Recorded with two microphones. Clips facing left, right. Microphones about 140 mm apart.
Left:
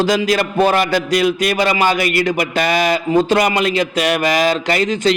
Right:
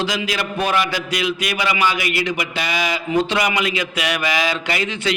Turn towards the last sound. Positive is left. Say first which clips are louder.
# left 7 dB
turn(degrees=40)  # may be behind; listen again after turning